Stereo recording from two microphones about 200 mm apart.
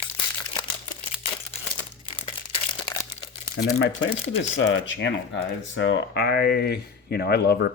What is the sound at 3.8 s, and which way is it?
Speech, 65° left (ahead or behind).